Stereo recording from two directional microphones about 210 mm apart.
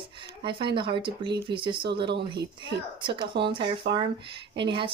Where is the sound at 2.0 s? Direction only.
55° right (ahead or behind).